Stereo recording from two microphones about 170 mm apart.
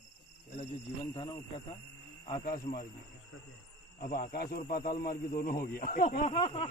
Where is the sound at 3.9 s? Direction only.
55° left (ahead or behind).